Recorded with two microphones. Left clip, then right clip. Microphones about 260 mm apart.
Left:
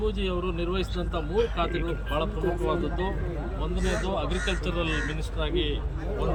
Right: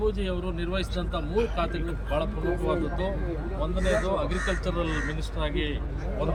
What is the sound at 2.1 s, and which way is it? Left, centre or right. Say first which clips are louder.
Speech: right 1 dB; centre.